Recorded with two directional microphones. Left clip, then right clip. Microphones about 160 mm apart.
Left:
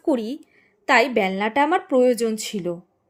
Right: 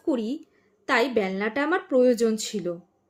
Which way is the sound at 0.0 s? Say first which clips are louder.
Left 4 dB; 30° left (ahead or behind).